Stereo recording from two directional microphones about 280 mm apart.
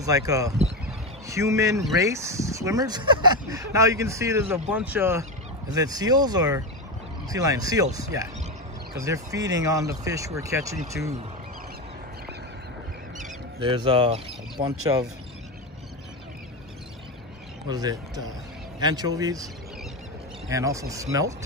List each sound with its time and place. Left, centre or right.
0.0 s speech: centre
13.2 s speech: centre
17.6 s speech: centre